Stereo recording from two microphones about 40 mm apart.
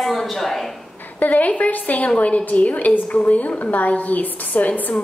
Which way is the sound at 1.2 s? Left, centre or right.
Left.